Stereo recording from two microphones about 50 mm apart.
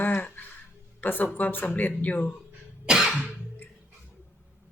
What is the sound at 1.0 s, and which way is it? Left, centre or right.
Speech, left.